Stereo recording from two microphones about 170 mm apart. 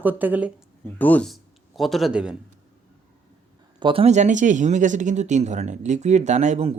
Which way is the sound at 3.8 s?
35° right (ahead or behind).